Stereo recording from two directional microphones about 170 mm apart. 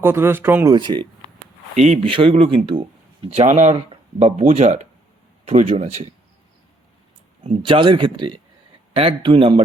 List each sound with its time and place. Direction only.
0.0 s speech: 15° right (ahead or behind)
0.7 s speech: 25° right (ahead or behind)
1.7 s speech: 40° right (ahead or behind)
7.6 s speech: 30° right (ahead or behind)